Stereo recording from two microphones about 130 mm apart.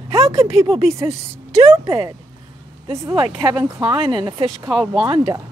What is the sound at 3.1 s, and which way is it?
Speech, 40° right (ahead or behind).